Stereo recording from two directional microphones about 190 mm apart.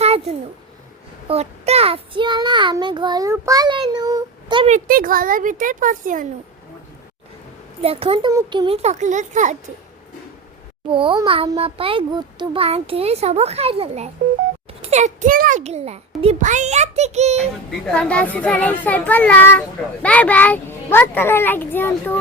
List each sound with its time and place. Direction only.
0.0 s a sound: 35° right (ahead or behind)
1.3 s child singing: 35° right (ahead or behind)
4.7 s a child's voice: 45° right (ahead or behind)
7.8 s a child's voice: 30° right (ahead or behind)
10.8 s a child's voice: 25° right (ahead or behind)
17.9 s speech: 5° left (ahead or behind)